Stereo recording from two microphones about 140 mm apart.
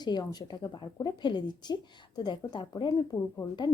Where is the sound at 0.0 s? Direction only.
30° left (ahead or behind).